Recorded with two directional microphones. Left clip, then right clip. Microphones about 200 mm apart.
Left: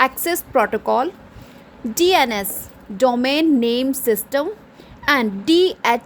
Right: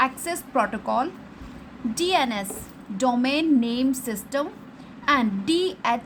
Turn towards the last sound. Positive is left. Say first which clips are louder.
# left 7 dB
turn(degrees=30)  # may be behind; listen again after turning